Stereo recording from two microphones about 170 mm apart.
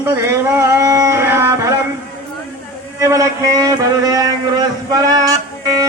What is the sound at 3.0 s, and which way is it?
A man's voice, 20° right (ahead or behind).